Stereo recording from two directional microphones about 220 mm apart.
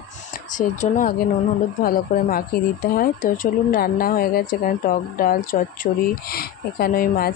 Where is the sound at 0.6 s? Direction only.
35° left (ahead or behind).